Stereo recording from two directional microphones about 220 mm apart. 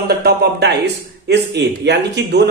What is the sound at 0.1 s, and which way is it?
A man's voice, 45° right (ahead or behind).